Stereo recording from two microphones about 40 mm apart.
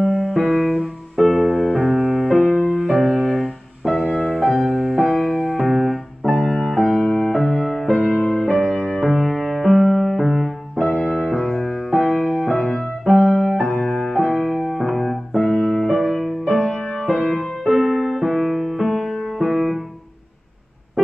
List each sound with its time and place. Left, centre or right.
0.0 s music: centre
1.9 s music: centre
2.1 s music: centre
8.2 s music: centre
8.5 s music: centre
13.7 s music: centre